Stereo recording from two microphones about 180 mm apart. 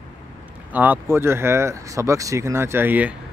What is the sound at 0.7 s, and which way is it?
Speech, 10° right (ahead or behind).